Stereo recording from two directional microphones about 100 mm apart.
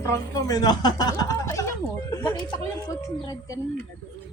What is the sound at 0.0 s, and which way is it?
Speech, 35° left (ahead or behind).